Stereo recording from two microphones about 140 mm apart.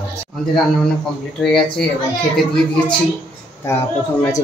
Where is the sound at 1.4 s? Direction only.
5° left (ahead or behind).